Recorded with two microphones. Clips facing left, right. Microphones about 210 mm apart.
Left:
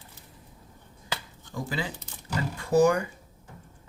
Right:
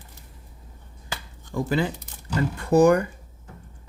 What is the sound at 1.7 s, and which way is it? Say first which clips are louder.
Speech: right 10 dB; 60° right (ahead or behind).